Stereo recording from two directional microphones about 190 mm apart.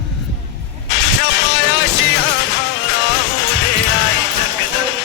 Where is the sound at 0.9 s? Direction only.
70° left (ahead or behind).